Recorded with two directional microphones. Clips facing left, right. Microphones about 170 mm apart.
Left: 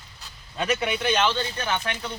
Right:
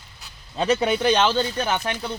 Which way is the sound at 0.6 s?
30° right (ahead or behind).